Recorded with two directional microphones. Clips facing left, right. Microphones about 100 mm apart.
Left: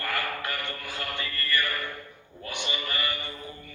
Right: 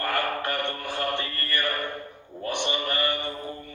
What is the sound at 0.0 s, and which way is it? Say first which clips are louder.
Mantra: right 5 dB; 40° right (ahead or behind).